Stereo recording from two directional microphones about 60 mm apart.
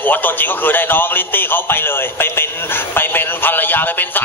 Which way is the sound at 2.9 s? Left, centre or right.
Left.